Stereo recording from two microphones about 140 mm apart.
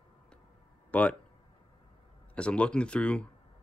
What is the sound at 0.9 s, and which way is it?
Speech, 10° left (ahead or behind).